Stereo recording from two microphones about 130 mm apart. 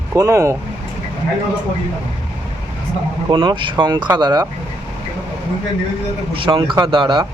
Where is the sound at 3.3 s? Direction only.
35° right (ahead or behind).